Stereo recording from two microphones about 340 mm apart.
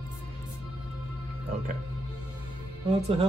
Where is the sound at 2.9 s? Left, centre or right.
Centre.